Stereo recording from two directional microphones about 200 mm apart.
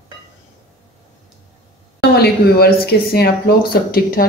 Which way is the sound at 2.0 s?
50° left (ahead or behind).